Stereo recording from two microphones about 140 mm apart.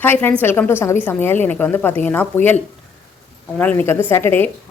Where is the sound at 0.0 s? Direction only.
15° left (ahead or behind).